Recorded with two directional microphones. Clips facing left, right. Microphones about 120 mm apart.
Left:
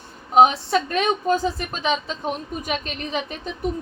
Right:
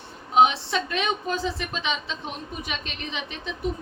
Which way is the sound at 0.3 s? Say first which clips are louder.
Left 4 dB; 40° left (ahead or behind).